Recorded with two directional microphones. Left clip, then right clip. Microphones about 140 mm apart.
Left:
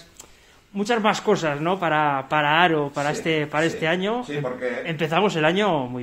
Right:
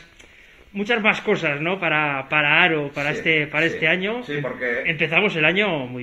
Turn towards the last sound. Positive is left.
turn(degrees=50)  # may be behind; listen again after turning